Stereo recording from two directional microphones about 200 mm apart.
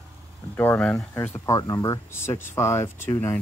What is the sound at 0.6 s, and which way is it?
Speech, 10° left (ahead or behind).